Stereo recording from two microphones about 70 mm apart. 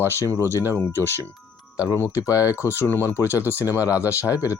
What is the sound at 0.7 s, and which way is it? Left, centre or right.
Speech, left.